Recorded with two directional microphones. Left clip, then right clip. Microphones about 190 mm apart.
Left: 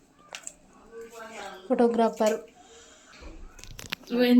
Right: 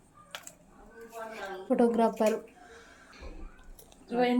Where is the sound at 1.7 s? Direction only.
5° left (ahead or behind).